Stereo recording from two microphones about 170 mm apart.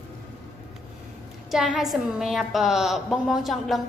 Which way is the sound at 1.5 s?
5° right (ahead or behind).